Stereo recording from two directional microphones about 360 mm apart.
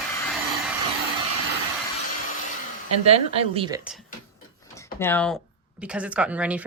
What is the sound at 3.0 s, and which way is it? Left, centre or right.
Speech, centre.